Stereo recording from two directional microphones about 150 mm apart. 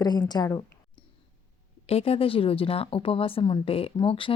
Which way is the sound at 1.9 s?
40° left (ahead or behind).